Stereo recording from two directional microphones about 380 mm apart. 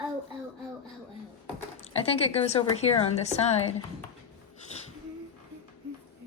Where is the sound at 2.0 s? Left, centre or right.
Centre.